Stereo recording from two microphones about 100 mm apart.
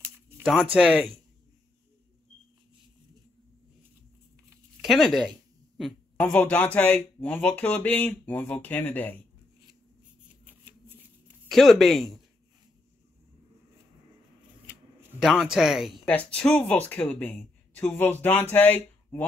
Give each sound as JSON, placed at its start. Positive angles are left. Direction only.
{"t": 0.7, "sound": "speech", "side_deg": -5}
{"t": 4.8, "sound": "speech", "side_deg": 0}
{"t": 6.3, "sound": "speech", "side_deg": 15}
{"t": 10.4, "sound": "shuffling cards", "side_deg": -20}
{"t": 11.4, "sound": "speech", "side_deg": 0}
{"t": 15.1, "sound": "speech", "side_deg": -5}
{"t": 16.1, "sound": "speech", "side_deg": 10}